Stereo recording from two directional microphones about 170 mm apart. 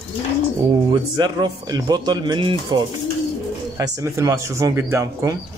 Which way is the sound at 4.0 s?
15° right (ahead or behind).